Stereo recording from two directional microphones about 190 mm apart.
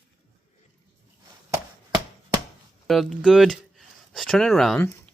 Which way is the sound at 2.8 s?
Centre (ahead or behind).